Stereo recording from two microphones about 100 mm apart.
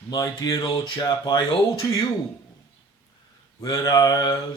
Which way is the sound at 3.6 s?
35° left (ahead or behind).